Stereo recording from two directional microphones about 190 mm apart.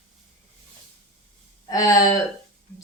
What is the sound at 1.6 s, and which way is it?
Speech, 15° left (ahead or behind).